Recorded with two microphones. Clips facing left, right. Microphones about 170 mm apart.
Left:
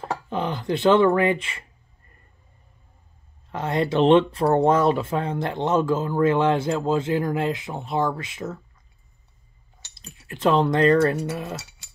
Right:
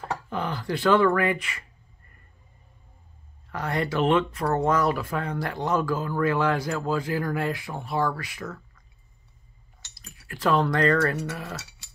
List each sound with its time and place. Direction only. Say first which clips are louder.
0.1 s speech: left 3 dB; 20° left (ahead or behind)
3.5 s speech: left 5 dB; 25° left (ahead or behind)
9.9 s speech: left 3 dB; 25° left (ahead or behind)